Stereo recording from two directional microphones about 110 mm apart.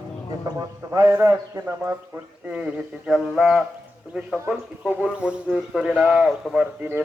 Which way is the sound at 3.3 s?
5° right (ahead or behind).